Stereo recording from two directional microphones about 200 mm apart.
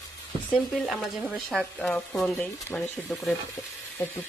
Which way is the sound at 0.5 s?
Centre (ahead or behind).